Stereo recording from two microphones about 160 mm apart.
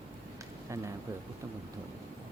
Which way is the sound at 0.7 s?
20° right (ahead or behind).